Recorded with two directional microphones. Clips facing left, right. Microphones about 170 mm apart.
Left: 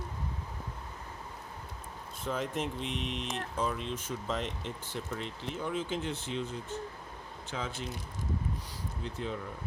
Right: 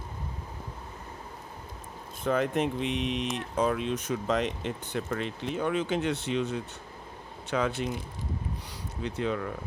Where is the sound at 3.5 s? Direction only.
70° right (ahead or behind).